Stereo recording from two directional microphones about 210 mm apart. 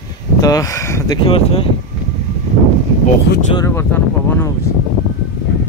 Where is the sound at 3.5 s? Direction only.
10° left (ahead or behind).